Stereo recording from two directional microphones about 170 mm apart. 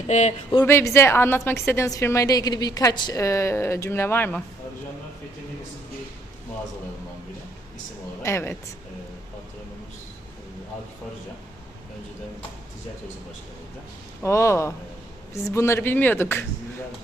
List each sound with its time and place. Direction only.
0.1 s speech: 40° left (ahead or behind)
0.6 s a woman's voice: 15° left (ahead or behind)
8.2 s a woman's voice: 15° left (ahead or behind)
14.2 s a woman's voice: 15° left (ahead or behind)